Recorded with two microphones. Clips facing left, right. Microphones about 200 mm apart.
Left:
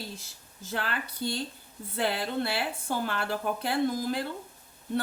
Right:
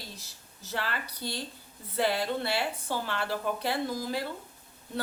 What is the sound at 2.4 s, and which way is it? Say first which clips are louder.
Speech: even; 55° left (ahead or behind).